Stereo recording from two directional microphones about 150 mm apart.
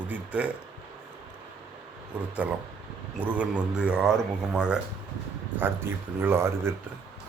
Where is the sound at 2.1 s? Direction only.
10° right (ahead or behind).